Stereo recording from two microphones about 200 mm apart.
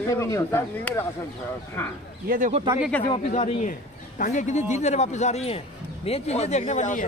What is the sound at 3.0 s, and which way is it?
Speech, 30° left (ahead or behind).